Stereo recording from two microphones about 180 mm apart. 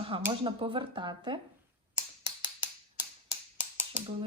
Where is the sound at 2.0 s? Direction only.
25° right (ahead or behind).